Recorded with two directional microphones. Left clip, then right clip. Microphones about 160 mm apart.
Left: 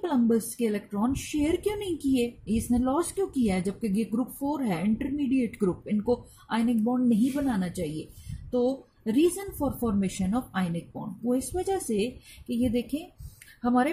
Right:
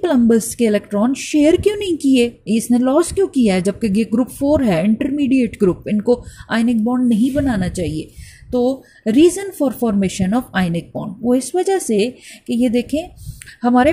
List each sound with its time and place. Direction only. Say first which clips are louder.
0.0 s a woman's voice: right 11 dB; 35° right (ahead or behind)